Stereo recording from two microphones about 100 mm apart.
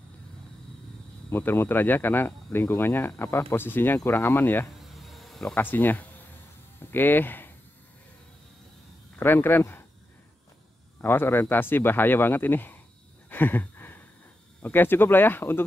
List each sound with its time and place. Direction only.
1.3 s speech: 25° left (ahead or behind)
4.7 s snake: centre (ahead or behind)
5.6 s speech: 20° left (ahead or behind)
9.2 s speech: 20° left (ahead or behind)
11.0 s speech: 20° left (ahead or behind)
13.3 s a sound: 20° left (ahead or behind)
14.6 s speech: 20° left (ahead or behind)